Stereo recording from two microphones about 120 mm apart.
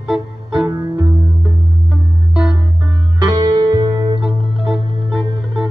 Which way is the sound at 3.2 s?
30° right (ahead or behind).